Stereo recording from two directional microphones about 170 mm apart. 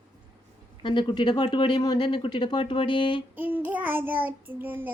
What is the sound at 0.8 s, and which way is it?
Speech, 30° left (ahead or behind).